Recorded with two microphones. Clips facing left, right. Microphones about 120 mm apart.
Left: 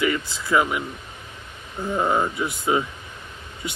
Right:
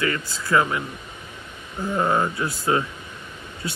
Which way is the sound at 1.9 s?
10° left (ahead or behind).